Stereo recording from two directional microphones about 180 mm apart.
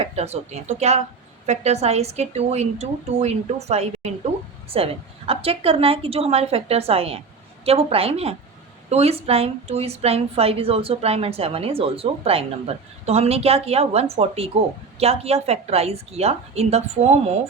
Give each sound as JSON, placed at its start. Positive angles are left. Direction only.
{"t": 0.0, "sound": "a woman's voice", "side_deg": -35}